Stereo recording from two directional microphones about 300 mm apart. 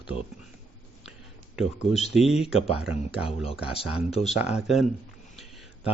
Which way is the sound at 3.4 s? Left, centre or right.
Centre.